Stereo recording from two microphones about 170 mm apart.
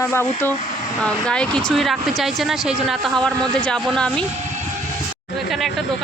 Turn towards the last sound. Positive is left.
turn(degrees=0)  # may be behind; listen again after turning